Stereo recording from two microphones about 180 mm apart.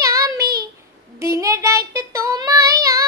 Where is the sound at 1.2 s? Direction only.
15° right (ahead or behind).